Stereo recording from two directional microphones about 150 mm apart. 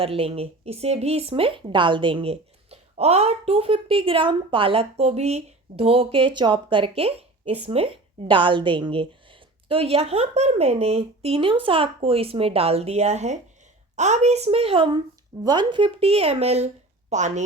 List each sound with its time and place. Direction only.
0.0 s speech: 40° right (ahead or behind)